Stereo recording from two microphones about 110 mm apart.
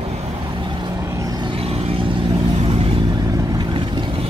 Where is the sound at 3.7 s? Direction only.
45° right (ahead or behind).